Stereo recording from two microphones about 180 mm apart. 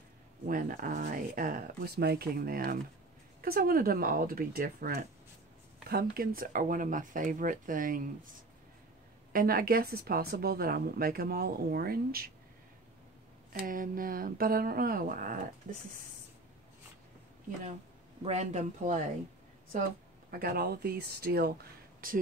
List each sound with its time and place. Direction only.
0.5 s a woman's voice: 50° right (ahead or behind)
9.3 s a woman's voice: 55° right (ahead or behind)
13.5 s speech: 50° right (ahead or behind)
18.2 s speech: 40° right (ahead or behind)
20.2 s a woman's voice: 55° right (ahead or behind)